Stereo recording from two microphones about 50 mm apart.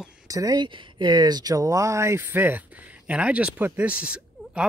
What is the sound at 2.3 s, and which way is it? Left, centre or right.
Speech, right.